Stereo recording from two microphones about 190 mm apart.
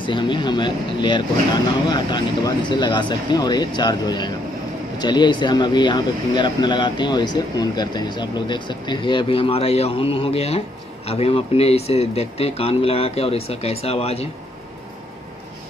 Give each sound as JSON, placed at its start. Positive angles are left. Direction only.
{"t": 0.0, "sound": "speech", "side_deg": 25}